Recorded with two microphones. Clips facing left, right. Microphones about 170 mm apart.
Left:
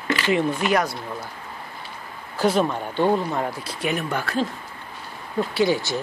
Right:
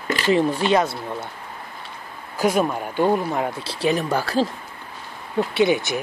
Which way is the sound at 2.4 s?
10° right (ahead or behind).